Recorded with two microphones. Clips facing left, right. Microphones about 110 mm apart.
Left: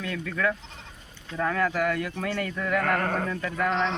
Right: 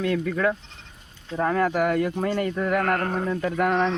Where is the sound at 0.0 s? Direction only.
40° right (ahead or behind).